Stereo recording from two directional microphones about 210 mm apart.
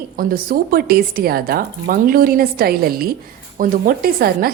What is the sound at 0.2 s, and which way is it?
Speech, 45° right (ahead or behind).